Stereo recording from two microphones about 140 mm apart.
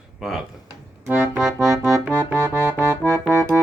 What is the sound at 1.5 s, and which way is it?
Music, 25° right (ahead or behind).